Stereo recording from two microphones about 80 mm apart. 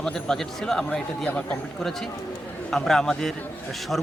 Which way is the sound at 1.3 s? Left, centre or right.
Centre.